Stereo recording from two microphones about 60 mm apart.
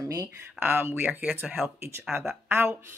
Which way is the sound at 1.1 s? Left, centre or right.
Right.